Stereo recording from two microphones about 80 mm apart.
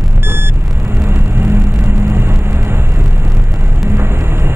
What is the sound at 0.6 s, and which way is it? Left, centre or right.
Vehicle, right.